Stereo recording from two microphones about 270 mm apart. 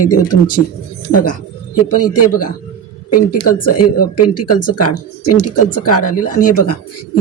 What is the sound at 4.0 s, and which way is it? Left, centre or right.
Speech, left.